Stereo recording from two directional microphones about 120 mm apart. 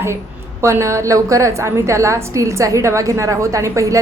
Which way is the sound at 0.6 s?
25° right (ahead or behind).